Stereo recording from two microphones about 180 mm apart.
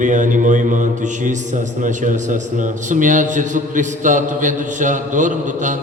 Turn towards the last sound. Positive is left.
turn(degrees=-45)  # may be behind; listen again after turning